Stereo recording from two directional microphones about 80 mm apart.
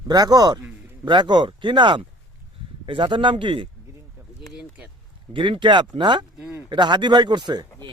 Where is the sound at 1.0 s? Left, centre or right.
Right.